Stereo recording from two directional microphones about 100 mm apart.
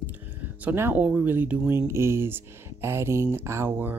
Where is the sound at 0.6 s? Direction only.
20° right (ahead or behind).